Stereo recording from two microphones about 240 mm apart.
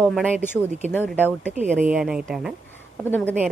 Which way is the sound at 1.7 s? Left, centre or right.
Centre.